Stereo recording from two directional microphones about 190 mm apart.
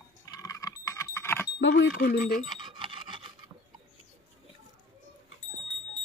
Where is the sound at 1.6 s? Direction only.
75° left (ahead or behind).